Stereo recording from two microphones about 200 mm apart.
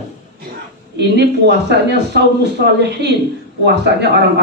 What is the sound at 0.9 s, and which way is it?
Speech, 60° right (ahead or behind).